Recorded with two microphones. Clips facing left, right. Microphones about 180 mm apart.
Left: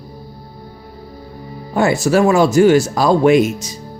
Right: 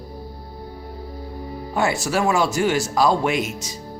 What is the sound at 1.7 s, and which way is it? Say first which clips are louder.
Speech: left 8 dB; 40° left (ahead or behind).